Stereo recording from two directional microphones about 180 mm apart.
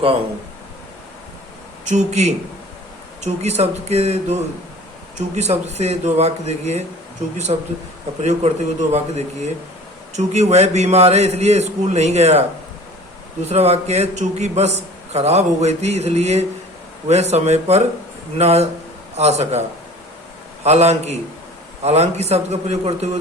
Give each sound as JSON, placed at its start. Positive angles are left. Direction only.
{"t": 1.8, "sound": "a man's voice", "side_deg": -40}
{"t": 20.7, "sound": "a man's voice", "side_deg": -35}